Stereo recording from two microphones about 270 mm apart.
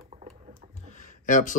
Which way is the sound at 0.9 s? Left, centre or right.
Left.